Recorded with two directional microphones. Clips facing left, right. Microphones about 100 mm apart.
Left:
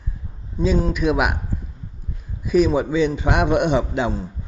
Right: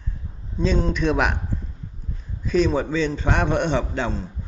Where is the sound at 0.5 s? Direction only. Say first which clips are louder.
Left 2 dB; 5° left (ahead or behind).